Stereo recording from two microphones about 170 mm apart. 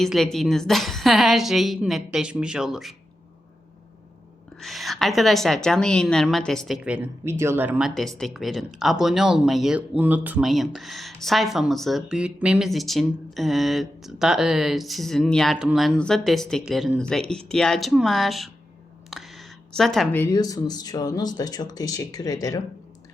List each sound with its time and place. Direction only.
0.0 s speech: centre (ahead or behind)
4.6 s speech: centre (ahead or behind)
19.1 s a sound: centre (ahead or behind)
20.1 s speech: 20° left (ahead or behind)